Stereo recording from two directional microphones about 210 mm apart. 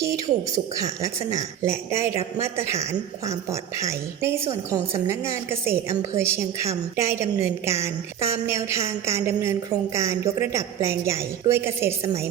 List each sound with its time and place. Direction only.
0.0 s a woman's voice: 15° right (ahead or behind)